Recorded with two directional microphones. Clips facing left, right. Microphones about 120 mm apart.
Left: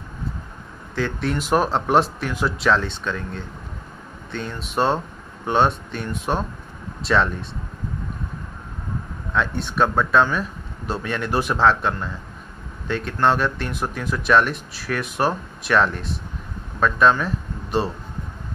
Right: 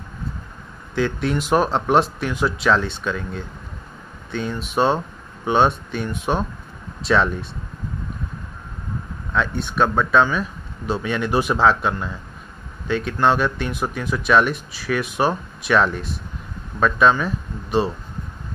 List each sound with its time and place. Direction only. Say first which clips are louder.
0.9 s speech: right 3 dB; 5° right (ahead or behind)
9.3 s speech: right 1 dB; centre (ahead or behind)